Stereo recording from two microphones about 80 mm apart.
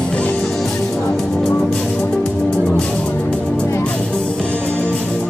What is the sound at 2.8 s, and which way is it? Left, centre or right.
Music, centre.